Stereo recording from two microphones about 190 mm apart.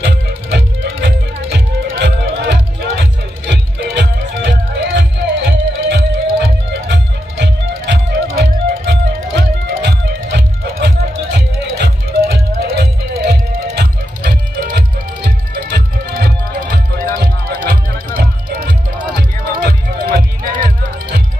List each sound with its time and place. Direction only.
0.0 s music: 65° right (ahead or behind); by 21.2 s 45° right (ahead or behind)